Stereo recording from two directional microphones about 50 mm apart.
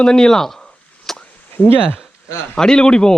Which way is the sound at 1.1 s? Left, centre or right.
Centre.